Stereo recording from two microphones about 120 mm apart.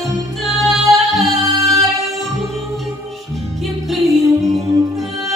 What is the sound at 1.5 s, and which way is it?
A capella, 30° right (ahead or behind).